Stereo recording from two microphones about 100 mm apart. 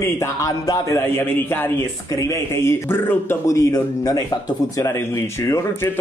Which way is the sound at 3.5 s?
35° left (ahead or behind).